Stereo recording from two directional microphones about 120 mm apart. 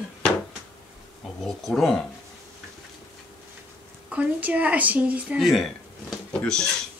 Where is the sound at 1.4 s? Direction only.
5° left (ahead or behind).